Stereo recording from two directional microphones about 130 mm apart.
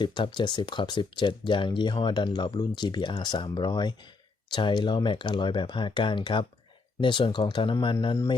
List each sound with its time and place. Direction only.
0.0 s speech: 35° left (ahead or behind)